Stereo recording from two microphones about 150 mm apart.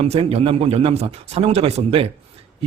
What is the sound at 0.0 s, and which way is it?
A man's voice, 40° right (ahead or behind).